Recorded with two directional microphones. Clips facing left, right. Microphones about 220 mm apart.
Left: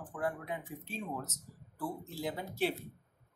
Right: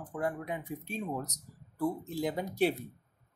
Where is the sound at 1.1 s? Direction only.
40° right (ahead or behind).